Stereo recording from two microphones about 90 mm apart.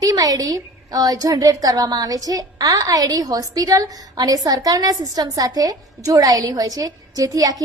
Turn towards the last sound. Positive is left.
turn(degrees=-40)  # may be behind; listen again after turning